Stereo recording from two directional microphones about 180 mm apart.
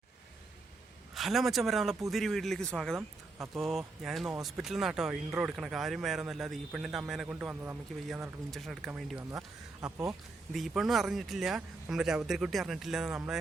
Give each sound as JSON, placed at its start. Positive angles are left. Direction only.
{"t": 1.1, "sound": "speech", "side_deg": 0}
{"t": 3.3, "sound": "speech", "side_deg": -15}
{"t": 3.6, "sound": "speech", "side_deg": 0}